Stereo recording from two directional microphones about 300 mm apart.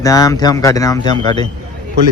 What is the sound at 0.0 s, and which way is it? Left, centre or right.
Speech, centre.